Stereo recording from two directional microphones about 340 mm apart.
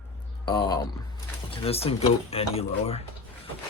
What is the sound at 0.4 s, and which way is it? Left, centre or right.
Speech, centre.